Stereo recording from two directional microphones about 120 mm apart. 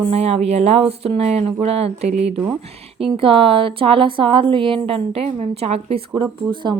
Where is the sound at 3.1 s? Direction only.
50° right (ahead or behind).